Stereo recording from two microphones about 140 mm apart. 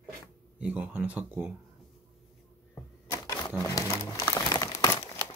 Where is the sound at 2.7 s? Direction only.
20° left (ahead or behind).